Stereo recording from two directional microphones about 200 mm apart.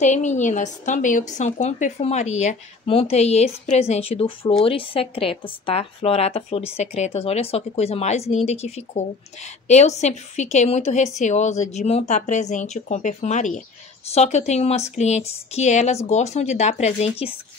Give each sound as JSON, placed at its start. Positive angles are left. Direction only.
{"t": 0.0, "sound": "a woman's voice", "side_deg": 35}